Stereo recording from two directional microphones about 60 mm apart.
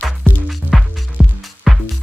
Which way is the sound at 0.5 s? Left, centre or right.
Centre.